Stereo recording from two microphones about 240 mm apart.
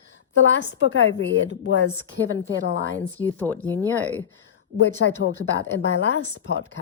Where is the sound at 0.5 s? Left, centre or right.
Left.